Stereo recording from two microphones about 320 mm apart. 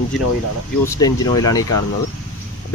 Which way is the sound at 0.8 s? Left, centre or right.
Centre.